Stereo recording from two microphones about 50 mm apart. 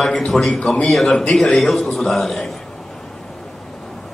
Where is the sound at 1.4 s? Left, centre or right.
Centre.